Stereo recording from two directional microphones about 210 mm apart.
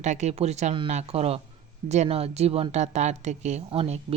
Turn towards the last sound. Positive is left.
turn(degrees=-30)  # may be behind; listen again after turning